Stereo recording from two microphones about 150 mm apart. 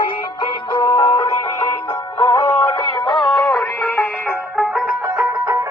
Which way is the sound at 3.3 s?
Centre (ahead or behind).